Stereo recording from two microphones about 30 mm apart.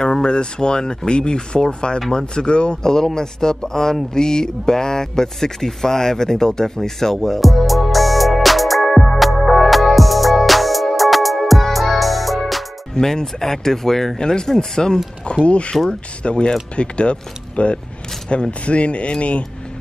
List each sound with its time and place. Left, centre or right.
0.0 s speech: left
2.8 s speech: centre
9.2 s music: centre
13.0 s speech: centre
14.1 s speech: left
15.4 s speech: left